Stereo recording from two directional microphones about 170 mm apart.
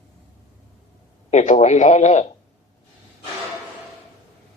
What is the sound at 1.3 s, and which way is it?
Speech, 40° left (ahead or behind).